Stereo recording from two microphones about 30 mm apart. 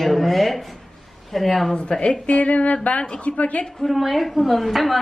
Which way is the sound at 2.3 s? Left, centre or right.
Left.